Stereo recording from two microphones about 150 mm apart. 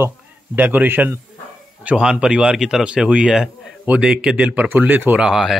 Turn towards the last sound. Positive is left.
turn(degrees=-5)  # may be behind; listen again after turning